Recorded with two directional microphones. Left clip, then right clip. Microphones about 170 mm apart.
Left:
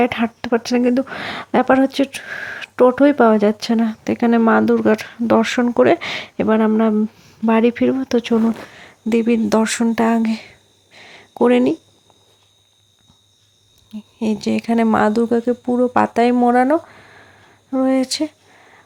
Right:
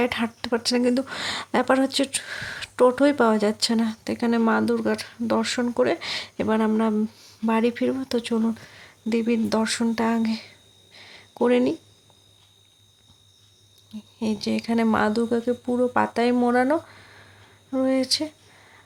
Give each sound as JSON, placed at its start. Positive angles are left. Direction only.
{"t": 0.0, "sound": "speech", "side_deg": 35}
{"t": 13.9, "sound": "speech", "side_deg": 45}